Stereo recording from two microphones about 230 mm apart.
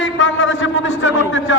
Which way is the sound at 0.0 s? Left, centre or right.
Left.